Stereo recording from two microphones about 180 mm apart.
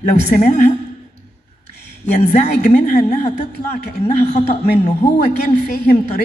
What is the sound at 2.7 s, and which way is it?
A woman's voice, 45° left (ahead or behind).